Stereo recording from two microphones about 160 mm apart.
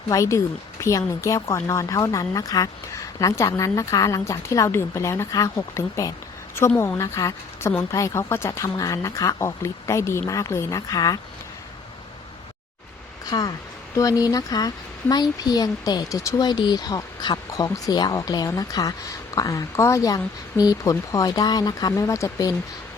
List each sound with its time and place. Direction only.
0.1 s a woman's voice: 20° left (ahead or behind)
13.3 s speech: 25° left (ahead or behind)